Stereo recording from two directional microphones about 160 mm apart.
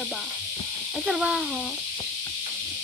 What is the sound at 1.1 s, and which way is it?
Speech, centre (ahead or behind).